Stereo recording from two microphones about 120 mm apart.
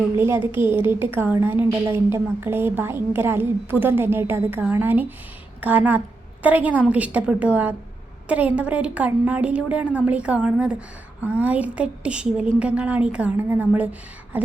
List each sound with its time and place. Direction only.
0.2 s a woman's voice: 20° right (ahead or behind)